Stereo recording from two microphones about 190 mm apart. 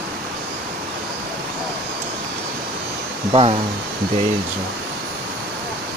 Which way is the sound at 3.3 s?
30° right (ahead or behind).